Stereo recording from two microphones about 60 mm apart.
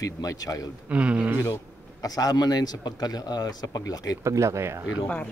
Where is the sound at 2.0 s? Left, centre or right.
Left.